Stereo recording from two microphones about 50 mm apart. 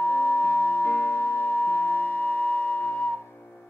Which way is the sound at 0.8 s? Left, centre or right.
Left.